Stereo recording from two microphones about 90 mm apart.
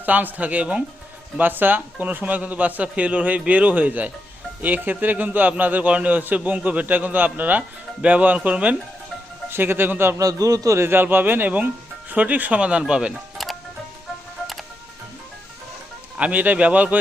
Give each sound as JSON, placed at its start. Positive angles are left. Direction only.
{"t": 0.0, "sound": "a man's voice", "side_deg": -20}
{"t": 10.2, "sound": "a man's voice", "side_deg": -40}
{"t": 10.8, "sound": "a man's voice", "side_deg": -25}
{"t": 13.4, "sound": "music", "side_deg": 0}
{"t": 16.1, "sound": "a man's voice", "side_deg": -15}